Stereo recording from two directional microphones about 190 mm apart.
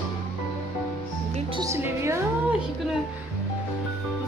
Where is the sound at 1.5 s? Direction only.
15° right (ahead or behind).